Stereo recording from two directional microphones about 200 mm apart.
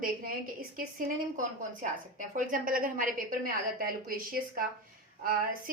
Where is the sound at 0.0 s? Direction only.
45° right (ahead or behind).